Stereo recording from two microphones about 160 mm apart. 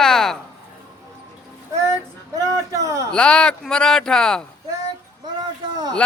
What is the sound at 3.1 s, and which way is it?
Speech, 5° left (ahead or behind).